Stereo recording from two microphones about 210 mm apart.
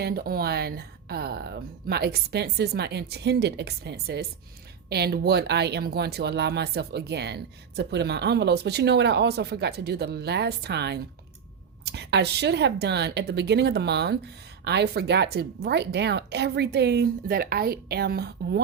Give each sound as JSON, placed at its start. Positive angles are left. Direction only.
{"t": 0.0, "sound": "speech", "side_deg": -45}